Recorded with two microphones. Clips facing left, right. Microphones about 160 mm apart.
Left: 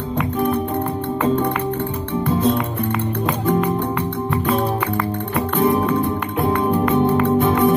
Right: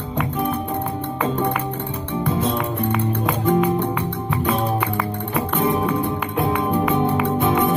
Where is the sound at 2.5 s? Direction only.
Centre (ahead or behind).